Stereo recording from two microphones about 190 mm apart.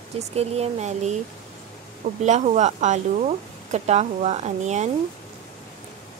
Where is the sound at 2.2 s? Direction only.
40° right (ahead or behind).